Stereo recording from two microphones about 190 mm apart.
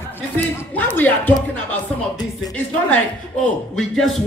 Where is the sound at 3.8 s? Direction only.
Centre (ahead or behind).